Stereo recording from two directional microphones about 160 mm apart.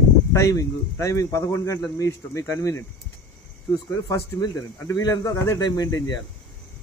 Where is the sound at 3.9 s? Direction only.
25° left (ahead or behind).